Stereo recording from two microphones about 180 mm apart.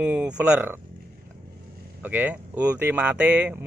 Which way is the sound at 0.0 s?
10° right (ahead or behind).